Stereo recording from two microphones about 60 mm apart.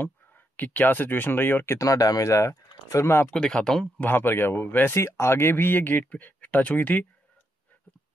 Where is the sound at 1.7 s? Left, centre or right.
Left.